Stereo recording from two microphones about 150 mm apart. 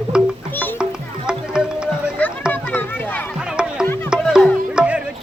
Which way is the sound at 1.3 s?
5° right (ahead or behind).